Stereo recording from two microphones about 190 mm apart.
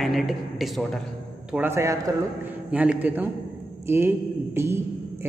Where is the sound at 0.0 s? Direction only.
Centre (ahead or behind).